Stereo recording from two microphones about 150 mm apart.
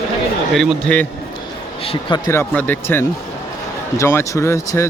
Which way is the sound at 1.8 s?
40° left (ahead or behind).